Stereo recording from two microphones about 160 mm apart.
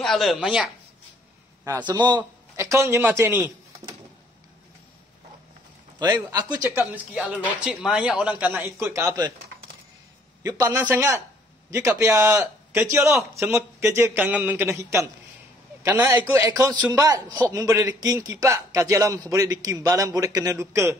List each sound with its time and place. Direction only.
0.0 s speech: centre (ahead or behind)
1.6 s a man's voice: 25° right (ahead or behind)
2.5 s a man's voice: 15° right (ahead or behind)
5.9 s a man's voice: 25° right (ahead or behind)
7.4 s a man's voice: 5° right (ahead or behind)
10.4 s a man's voice: 20° right (ahead or behind)